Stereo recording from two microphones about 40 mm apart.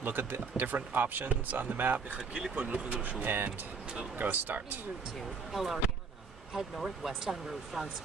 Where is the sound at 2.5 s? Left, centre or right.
Right.